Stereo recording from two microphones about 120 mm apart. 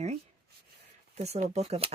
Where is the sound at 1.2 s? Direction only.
65° right (ahead or behind).